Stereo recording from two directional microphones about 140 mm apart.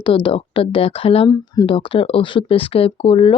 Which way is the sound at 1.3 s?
25° left (ahead or behind).